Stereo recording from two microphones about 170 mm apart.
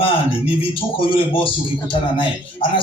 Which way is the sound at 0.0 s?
30° left (ahead or behind).